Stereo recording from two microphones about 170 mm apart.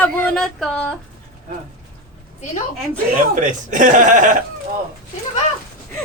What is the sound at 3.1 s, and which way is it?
Speech, 50° right (ahead or behind).